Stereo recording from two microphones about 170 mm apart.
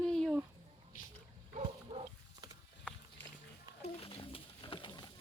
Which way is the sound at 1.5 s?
35° right (ahead or behind).